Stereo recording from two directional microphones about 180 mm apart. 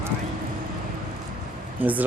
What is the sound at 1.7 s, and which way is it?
Speech, 10° right (ahead or behind).